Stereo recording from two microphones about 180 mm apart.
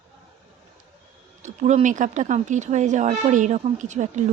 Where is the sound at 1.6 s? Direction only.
40° right (ahead or behind).